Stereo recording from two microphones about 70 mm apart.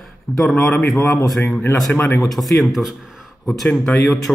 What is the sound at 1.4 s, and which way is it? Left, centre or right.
Speech, left.